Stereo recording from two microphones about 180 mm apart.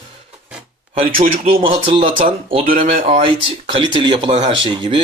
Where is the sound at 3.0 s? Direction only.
30° right (ahead or behind).